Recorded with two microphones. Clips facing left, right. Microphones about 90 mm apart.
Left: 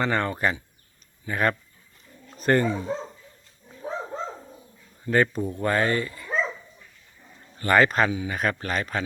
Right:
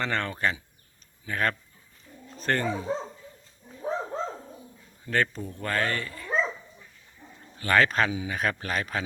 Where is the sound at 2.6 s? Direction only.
Centre (ahead or behind).